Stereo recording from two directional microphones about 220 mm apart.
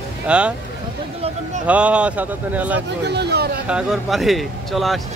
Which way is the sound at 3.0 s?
50° right (ahead or behind).